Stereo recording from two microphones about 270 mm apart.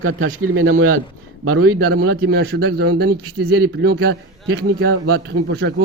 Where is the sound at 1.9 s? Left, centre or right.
Right.